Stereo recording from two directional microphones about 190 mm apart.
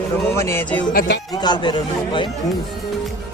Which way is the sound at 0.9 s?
55° left (ahead or behind).